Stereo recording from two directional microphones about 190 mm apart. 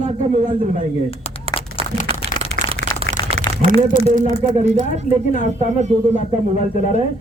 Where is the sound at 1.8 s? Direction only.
20° left (ahead or behind).